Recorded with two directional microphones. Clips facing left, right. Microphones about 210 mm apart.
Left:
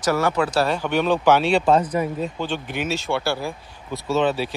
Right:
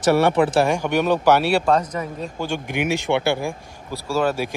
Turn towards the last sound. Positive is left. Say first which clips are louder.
# left 1 dB
turn(degrees=-10)  # may be behind; listen again after turning